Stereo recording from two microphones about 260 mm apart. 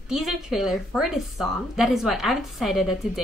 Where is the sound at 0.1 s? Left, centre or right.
Centre.